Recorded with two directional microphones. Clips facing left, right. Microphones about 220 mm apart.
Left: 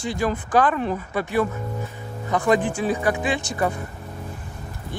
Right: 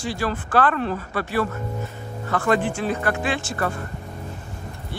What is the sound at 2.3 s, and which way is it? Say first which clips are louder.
A man's voice: left 1 dB; 15° left (ahead or behind).